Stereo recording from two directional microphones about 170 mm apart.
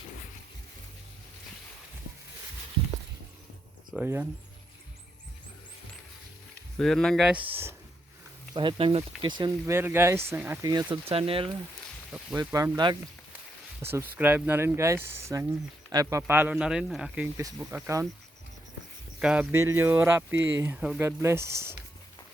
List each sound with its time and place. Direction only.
3.9 s speech: 10° right (ahead or behind)
6.7 s speech: 5° left (ahead or behind); by 7.8 s 10° right (ahead or behind)
8.5 s speech: 30° right (ahead or behind)
9.7 s speech: 15° right (ahead or behind)
10.7 s speech: 25° right (ahead or behind)
12.5 s speech: 25° right (ahead or behind)
13.8 s speech: 15° right (ahead or behind)
17.3 s speech: 15° right (ahead or behind)
19.2 s speech: 5° right (ahead or behind)